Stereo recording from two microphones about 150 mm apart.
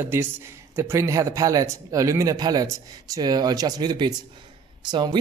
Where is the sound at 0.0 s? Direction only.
15° right (ahead or behind).